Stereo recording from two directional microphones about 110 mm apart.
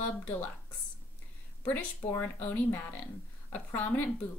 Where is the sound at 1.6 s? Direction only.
15° left (ahead or behind).